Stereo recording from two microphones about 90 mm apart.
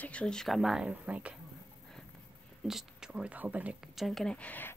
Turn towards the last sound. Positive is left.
turn(degrees=20)  # may be behind; listen again after turning